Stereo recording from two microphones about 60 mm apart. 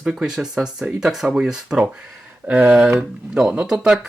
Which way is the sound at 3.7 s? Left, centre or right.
Centre.